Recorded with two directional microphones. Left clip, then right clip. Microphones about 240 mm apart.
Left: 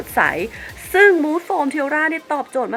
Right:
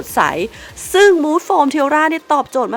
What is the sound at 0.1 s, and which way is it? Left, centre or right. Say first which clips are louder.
Speech: right 2 dB; right.